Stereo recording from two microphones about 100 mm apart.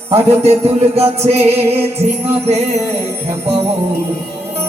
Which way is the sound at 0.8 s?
90° right.